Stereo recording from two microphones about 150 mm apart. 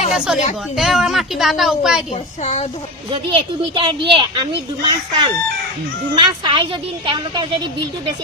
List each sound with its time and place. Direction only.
0.1 s a woman's voice: 5° right (ahead or behind)
2.4 s speech: 50° left (ahead or behind)
3.1 s speech: 35° right (ahead or behind)